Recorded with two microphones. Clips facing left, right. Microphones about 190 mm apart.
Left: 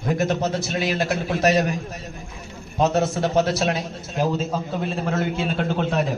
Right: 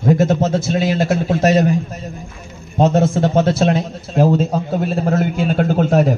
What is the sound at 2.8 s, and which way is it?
A man's voice, 30° right (ahead or behind).